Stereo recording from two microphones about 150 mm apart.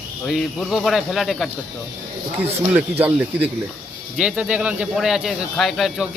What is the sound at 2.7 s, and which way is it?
Speech, 10° right (ahead or behind).